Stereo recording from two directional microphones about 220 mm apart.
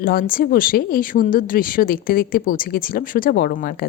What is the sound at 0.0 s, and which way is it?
Speech, 40° left (ahead or behind).